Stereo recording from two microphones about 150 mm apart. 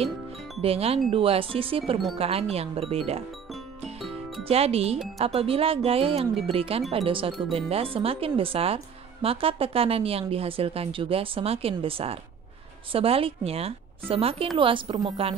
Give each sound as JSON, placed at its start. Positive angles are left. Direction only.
{"t": 0.6, "sound": "speech", "side_deg": -40}
{"t": 4.5, "sound": "speech", "side_deg": -40}